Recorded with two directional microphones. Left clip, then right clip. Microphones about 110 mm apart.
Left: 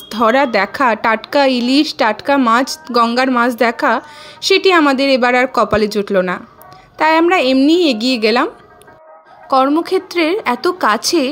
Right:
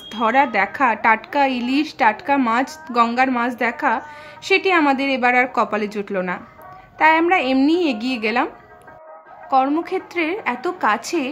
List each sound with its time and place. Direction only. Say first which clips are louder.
0.1 s a woman's voice: left 5 dB; 45° left (ahead or behind)
9.8 s a woman's voice: left 7 dB; 45° left (ahead or behind)